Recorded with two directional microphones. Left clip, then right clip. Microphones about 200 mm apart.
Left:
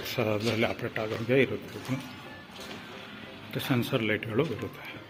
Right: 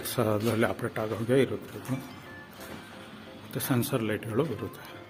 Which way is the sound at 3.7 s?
5° right (ahead or behind).